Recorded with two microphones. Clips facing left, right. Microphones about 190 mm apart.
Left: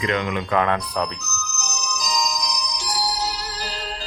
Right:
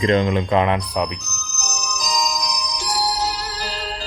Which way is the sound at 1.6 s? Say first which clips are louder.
Right 3 dB; 45° right (ahead or behind).